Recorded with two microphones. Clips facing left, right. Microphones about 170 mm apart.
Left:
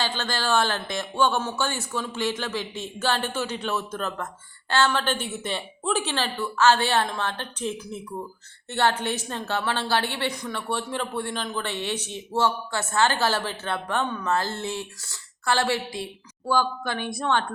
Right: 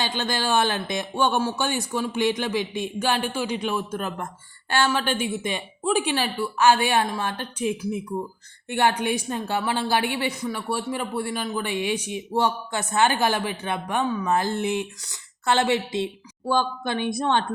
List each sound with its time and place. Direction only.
0.0 s a woman's voice: 15° right (ahead or behind)